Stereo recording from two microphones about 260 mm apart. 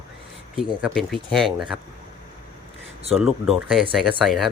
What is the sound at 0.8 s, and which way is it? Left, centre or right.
Speech, centre.